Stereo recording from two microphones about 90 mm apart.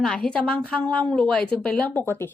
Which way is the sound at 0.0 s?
10° left (ahead or behind).